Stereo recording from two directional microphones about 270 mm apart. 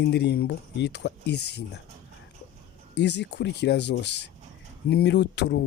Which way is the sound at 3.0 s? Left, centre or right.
Left.